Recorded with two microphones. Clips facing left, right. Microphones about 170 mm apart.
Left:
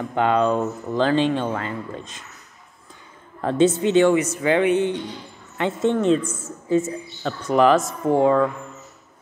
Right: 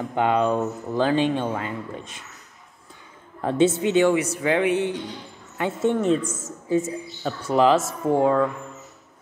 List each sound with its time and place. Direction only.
0.1 s speech: 15° right (ahead or behind)
3.3 s a woman's voice: 10° right (ahead or behind)
6.2 s a woman's voice: 45° right (ahead or behind)
6.7 s speech: 10° right (ahead or behind)